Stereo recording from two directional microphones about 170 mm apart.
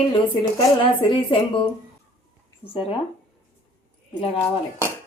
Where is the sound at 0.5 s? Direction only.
30° left (ahead or behind).